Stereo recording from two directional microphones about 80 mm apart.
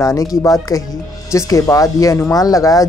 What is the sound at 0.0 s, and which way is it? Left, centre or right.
Speech, left.